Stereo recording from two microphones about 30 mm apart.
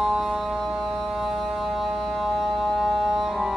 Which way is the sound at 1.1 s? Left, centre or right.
Centre.